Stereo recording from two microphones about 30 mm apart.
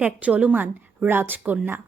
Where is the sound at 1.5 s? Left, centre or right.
Right.